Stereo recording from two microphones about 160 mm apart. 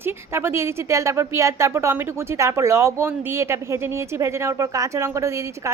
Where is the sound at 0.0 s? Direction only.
15° right (ahead or behind).